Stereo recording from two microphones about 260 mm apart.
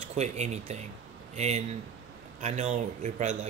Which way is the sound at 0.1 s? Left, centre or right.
Right.